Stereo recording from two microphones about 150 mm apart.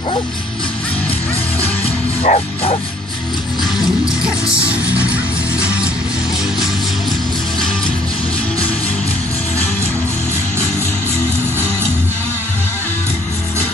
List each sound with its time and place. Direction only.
2.3 s bow-wow: 55° left (ahead or behind)